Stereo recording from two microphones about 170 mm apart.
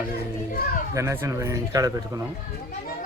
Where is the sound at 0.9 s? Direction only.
15° right (ahead or behind).